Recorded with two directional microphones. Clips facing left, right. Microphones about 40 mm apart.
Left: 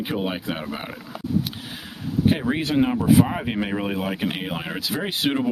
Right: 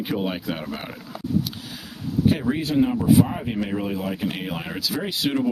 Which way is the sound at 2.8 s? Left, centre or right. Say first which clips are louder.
Even; left.